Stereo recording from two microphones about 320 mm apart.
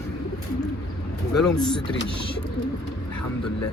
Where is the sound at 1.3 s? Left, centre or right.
Centre.